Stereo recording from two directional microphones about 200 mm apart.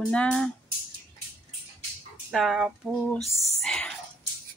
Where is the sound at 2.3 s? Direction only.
Centre (ahead or behind).